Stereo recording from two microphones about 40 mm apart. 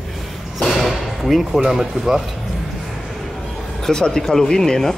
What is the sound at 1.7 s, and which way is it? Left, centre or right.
Speech, centre.